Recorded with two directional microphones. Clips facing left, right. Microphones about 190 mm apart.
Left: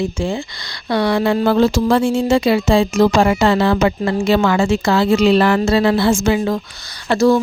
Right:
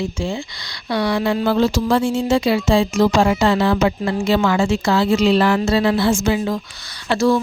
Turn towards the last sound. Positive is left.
turn(degrees=40)  # may be behind; listen again after turning